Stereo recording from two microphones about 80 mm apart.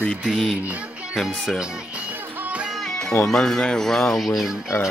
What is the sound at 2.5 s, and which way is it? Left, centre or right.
Music, centre.